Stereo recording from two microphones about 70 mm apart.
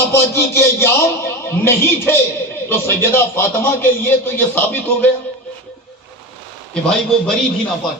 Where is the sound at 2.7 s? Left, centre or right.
Left.